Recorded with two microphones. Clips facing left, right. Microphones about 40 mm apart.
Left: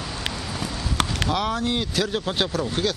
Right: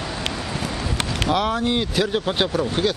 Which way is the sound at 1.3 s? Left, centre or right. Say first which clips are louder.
Right 7 dB; centre.